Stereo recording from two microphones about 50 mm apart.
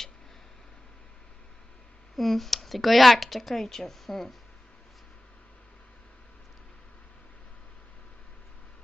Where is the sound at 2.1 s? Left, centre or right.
Centre.